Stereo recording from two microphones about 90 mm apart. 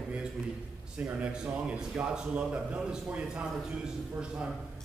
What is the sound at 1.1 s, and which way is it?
A man's voice, 10° right (ahead or behind).